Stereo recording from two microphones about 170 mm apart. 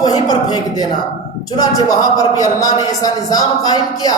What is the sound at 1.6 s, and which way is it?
A man's voice, 20° left (ahead or behind).